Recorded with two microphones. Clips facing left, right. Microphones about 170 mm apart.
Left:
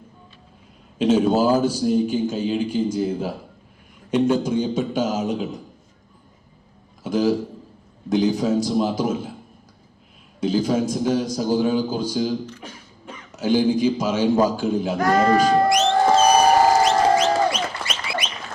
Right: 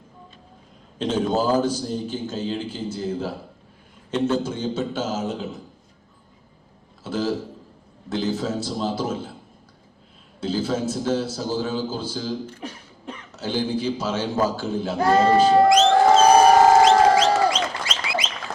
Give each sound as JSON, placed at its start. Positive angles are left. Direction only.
{"t": 0.9, "sound": "a man's voice", "side_deg": 10}
{"t": 7.0, "sound": "a sound", "side_deg": 15}
{"t": 8.1, "sound": "a man's voice", "side_deg": 15}
{"t": 10.4, "sound": "a man's voice", "side_deg": 15}
{"t": 12.5, "sound": "beatboxing", "side_deg": -50}
{"t": 13.3, "sound": "a man's voice", "side_deg": 10}
{"t": 14.9, "sound": "speech", "side_deg": -30}
{"t": 16.8, "sound": "music", "side_deg": -90}